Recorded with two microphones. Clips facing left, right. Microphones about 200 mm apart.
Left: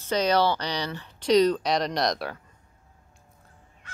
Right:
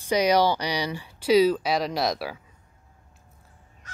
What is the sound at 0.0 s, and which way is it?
Speech, 10° right (ahead or behind).